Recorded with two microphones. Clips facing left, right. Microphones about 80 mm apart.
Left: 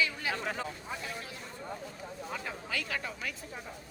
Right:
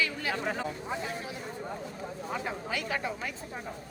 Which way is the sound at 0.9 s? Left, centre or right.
Right.